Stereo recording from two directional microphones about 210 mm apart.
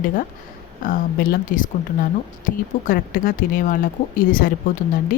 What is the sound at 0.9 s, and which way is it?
Speech, 40° left (ahead or behind).